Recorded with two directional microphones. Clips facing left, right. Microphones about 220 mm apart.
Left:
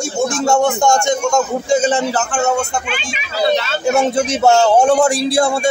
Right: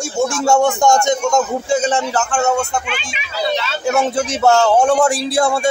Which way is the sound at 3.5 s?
45° left (ahead or behind).